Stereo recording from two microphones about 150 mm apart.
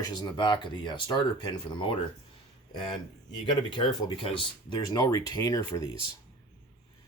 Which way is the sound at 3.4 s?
30° left (ahead or behind).